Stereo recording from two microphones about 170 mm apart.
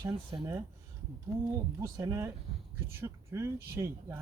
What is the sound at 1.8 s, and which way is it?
Speech, 20° right (ahead or behind).